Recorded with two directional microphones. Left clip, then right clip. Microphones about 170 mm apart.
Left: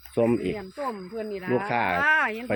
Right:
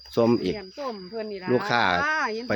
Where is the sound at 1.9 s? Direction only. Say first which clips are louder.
Left 3 dB; 75° left (ahead or behind).